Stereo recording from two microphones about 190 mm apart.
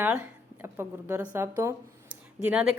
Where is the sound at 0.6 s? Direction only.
10° right (ahead or behind).